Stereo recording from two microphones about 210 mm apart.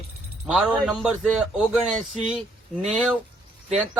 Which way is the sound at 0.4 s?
5° right (ahead or behind).